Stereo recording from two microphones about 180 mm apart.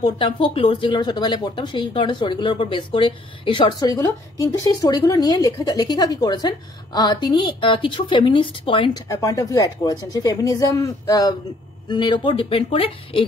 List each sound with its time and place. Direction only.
0.0 s speech: 30° left (ahead or behind)